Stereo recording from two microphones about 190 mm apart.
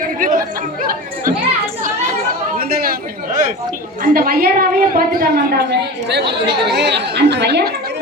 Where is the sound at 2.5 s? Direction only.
50° right (ahead or behind).